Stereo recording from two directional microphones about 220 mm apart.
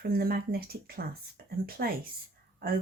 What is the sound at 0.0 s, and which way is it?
Speech, 45° right (ahead or behind).